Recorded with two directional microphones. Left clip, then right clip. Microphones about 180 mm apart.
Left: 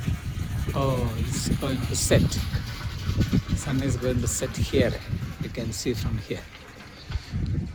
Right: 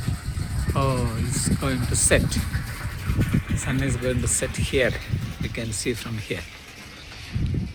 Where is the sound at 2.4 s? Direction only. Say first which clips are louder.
Right 2 dB; 85° left.